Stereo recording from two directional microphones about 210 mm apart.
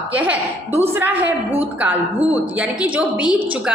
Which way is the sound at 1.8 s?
10° right (ahead or behind).